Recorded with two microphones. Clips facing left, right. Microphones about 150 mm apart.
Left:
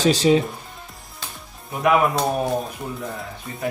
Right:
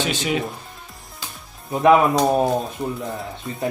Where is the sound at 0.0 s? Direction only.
35° left (ahead or behind).